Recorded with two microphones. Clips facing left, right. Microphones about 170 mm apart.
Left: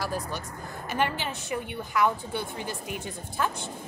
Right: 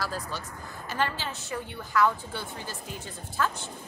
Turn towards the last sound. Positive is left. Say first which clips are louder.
# even
turn(degrees=15)  # may be behind; listen again after turning